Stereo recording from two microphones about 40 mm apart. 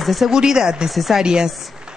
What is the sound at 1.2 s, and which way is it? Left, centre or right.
Speech, centre.